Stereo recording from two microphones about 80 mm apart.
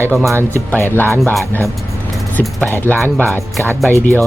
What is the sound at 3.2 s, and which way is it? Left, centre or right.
Speech, right.